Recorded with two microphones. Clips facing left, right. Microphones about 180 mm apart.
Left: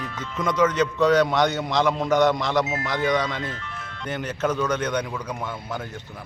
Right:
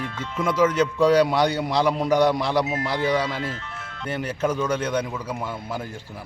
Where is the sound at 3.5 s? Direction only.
30° right (ahead or behind).